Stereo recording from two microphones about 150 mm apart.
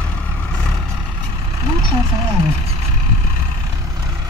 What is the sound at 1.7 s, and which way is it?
Vehicle, 30° right (ahead or behind).